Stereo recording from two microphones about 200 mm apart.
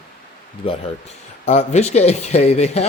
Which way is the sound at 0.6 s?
25° left (ahead or behind).